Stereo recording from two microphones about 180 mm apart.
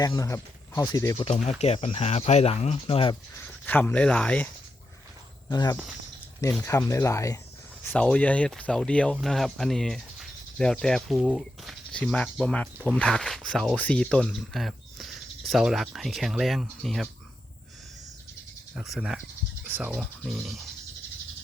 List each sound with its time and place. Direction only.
0.0 s speech: 20° left (ahead or behind)
1.2 s speech: 35° left (ahead or behind)
3.7 s speech: 10° left (ahead or behind)
5.5 s speech: 25° left (ahead or behind)
5.7 s speech: 5° right (ahead or behind)
6.4 s speech: 10° left (ahead or behind)
18.7 s speech: 5° right (ahead or behind)